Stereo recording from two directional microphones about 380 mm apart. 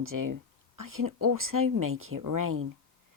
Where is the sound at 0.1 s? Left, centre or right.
Right.